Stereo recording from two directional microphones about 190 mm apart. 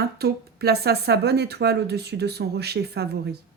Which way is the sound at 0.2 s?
55° right (ahead or behind).